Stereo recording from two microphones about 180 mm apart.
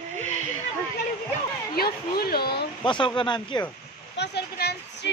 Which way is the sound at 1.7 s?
60° left (ahead or behind).